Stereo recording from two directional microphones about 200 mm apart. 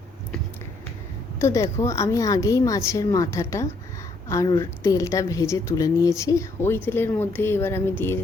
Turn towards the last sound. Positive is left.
turn(degrees=10)  # may be behind; listen again after turning